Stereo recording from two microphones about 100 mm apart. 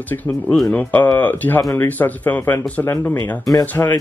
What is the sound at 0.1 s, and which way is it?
Speech, 20° left (ahead or behind).